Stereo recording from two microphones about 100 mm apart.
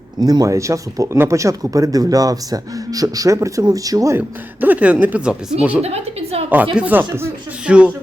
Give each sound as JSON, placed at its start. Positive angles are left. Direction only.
{"t": 0.2, "sound": "speech", "side_deg": -40}
{"t": 4.2, "sound": "speech", "side_deg": -15}
{"t": 5.8, "sound": "a woman's voice", "side_deg": -90}
{"t": 6.5, "sound": "speech", "side_deg": -15}
{"t": 7.7, "sound": "speech", "side_deg": -10}